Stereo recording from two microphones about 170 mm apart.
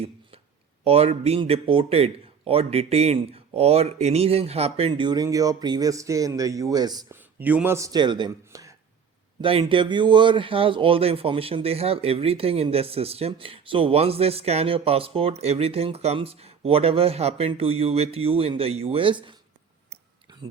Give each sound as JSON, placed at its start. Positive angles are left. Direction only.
{"t": 0.9, "sound": "speech", "side_deg": -35}
{"t": 7.2, "sound": "speech", "side_deg": -10}